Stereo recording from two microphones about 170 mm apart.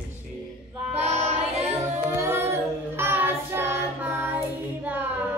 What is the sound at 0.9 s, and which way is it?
Child singing, 40° right (ahead or behind).